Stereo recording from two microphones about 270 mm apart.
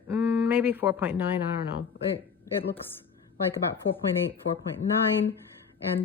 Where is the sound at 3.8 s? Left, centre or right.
Left.